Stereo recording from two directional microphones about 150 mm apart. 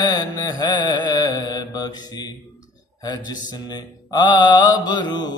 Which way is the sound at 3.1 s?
30° left (ahead or behind).